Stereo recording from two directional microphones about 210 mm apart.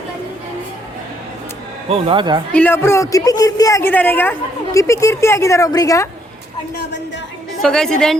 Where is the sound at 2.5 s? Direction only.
10° left (ahead or behind).